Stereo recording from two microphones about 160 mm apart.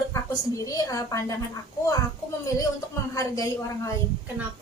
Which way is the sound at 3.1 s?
20° left (ahead or behind).